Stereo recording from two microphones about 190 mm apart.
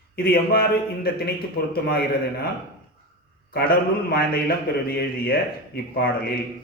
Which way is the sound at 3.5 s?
55° left (ahead or behind).